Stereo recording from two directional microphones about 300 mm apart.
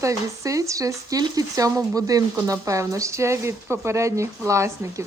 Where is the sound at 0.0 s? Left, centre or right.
Centre.